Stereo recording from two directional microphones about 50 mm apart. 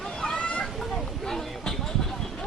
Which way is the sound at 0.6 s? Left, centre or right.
Centre.